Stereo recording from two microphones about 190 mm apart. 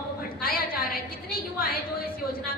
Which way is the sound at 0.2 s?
50° left (ahead or behind).